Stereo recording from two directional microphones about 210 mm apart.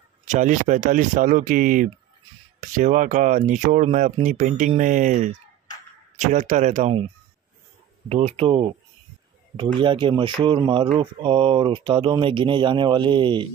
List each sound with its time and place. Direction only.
0.3 s speech: 35° right (ahead or behind)
8.1 s speech: 30° right (ahead or behind)